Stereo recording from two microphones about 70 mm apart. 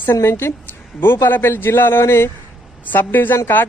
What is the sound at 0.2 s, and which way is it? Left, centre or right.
A man's voice, left.